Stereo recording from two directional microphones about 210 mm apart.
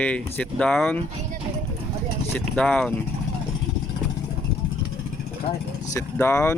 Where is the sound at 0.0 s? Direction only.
5° left (ahead or behind).